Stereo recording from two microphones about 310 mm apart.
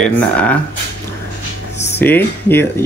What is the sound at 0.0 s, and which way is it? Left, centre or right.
Speech, centre.